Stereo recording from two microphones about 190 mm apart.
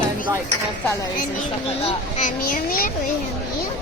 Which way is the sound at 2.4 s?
50° left (ahead or behind).